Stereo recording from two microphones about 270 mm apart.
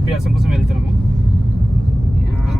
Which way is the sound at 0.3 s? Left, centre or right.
Centre.